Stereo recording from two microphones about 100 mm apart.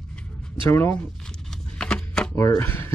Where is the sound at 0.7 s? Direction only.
25° left (ahead or behind).